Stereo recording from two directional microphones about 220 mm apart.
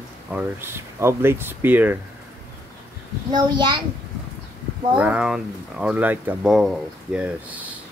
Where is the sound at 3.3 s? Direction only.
20° right (ahead or behind).